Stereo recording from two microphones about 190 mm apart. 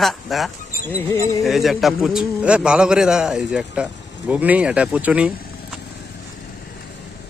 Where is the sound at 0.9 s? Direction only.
15° left (ahead or behind).